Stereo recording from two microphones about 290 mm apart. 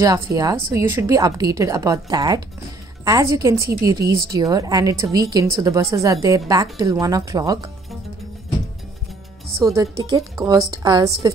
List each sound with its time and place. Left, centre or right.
0.0 s a woman's voice: centre
9.6 s a woman's voice: centre